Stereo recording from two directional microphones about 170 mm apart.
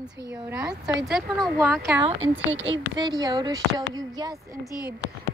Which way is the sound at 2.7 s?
25° right (ahead or behind).